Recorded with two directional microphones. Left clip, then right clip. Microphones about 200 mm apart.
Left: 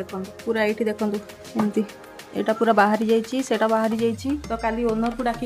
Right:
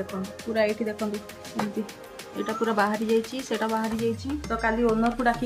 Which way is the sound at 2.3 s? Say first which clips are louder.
Left 7 dB; 50° left (ahead or behind).